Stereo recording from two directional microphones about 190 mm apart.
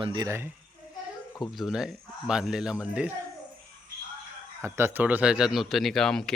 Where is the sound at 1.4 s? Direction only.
Centre (ahead or behind).